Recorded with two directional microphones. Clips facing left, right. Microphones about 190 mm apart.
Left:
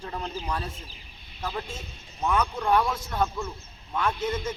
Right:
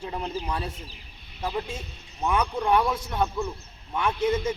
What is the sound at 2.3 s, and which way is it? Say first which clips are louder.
Speech: right 1 dB; 15° right (ahead or behind).